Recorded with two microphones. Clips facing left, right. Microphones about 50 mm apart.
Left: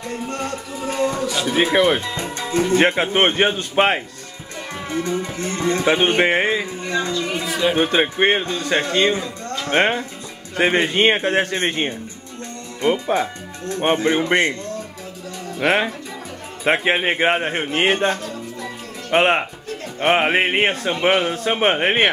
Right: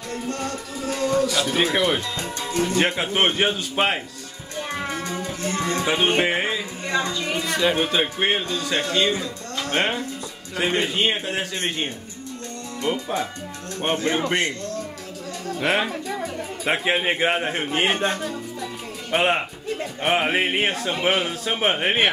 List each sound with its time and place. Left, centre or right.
0.3 s a man's voice: left
5.2 s speech: left
7.4 s music: centre
7.7 s a man's voice: left
10.9 s a man's voice: left
15.6 s a man's voice: centre